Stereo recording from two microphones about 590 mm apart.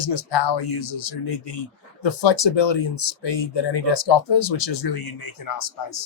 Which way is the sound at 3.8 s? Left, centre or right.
Left.